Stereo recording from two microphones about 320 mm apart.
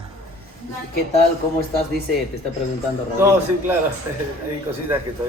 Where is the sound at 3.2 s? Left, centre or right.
Centre.